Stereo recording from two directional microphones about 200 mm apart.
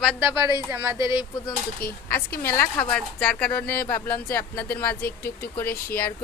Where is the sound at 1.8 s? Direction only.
50° left (ahead or behind).